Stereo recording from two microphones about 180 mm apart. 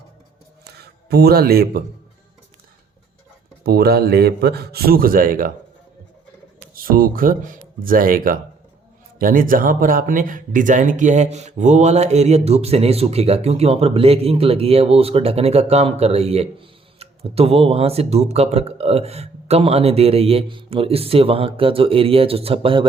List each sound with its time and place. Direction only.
0.6 s a sound: 60° right (ahead or behind)
3.6 s a man's voice: 60° right (ahead or behind)
6.7 s speech: 55° right (ahead or behind); by 22.9 s 30° right (ahead or behind)